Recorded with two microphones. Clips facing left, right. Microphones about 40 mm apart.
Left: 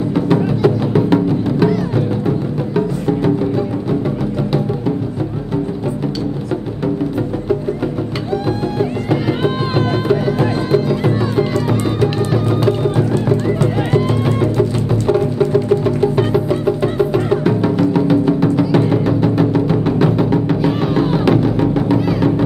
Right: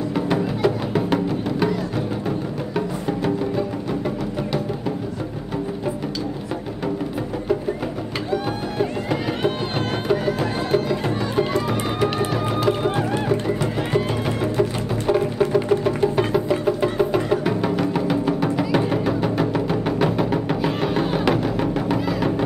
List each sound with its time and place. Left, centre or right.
0.1 s music: centre
8.3 s music: centre
11.5 s music: centre
13.5 s music: centre